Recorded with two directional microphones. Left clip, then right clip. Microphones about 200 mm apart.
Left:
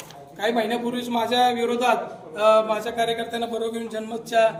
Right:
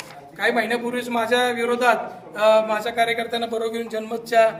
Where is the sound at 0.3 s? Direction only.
Centre (ahead or behind).